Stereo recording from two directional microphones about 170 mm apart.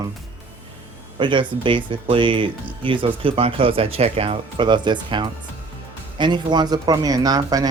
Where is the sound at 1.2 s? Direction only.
30° right (ahead or behind).